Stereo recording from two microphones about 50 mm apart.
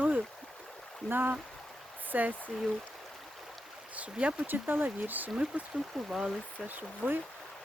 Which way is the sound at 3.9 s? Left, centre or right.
Right.